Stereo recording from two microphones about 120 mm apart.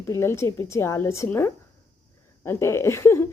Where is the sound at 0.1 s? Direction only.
20° left (ahead or behind).